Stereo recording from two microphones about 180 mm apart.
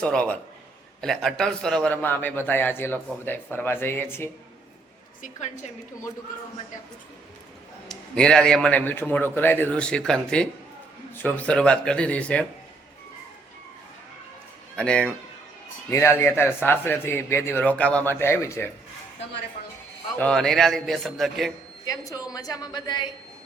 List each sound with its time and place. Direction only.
0.0 s a man's voice: 5° left (ahead or behind)
7.9 s a man's voice: 5° left (ahead or behind)
14.8 s a man's voice: 5° left (ahead or behind)
20.1 s a man's voice: 5° left (ahead or behind)
21.8 s a woman's voice: 20° left (ahead or behind)